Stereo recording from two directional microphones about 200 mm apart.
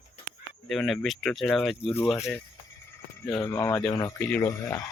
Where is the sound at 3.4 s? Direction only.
15° left (ahead or behind).